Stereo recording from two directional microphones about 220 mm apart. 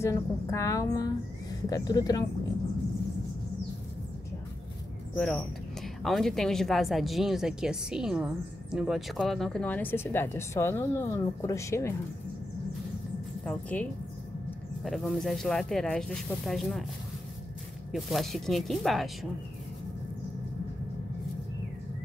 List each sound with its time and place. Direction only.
0.0 s a woman's voice: 15° left (ahead or behind)
5.1 s speech: 5° left (ahead or behind)
13.5 s a woman's voice: 5° left (ahead or behind)
17.9 s speech: centre (ahead or behind)